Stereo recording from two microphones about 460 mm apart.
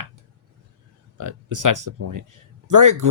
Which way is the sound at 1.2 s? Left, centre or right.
Right.